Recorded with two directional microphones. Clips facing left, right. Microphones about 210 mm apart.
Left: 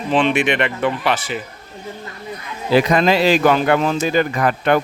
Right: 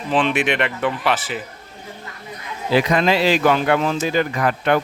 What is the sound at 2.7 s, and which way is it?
Speech, 40° left (ahead or behind).